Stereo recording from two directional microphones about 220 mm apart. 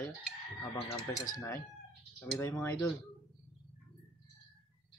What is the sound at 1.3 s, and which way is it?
Speech, 40° left (ahead or behind).